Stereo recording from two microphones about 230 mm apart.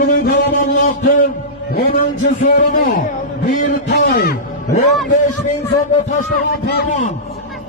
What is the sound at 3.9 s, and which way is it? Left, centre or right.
Speech, left.